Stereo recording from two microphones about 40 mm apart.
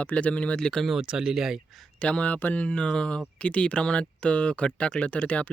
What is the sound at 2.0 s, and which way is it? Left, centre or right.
Speech, left.